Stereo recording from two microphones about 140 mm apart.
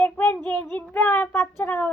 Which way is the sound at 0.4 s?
15° left (ahead or behind).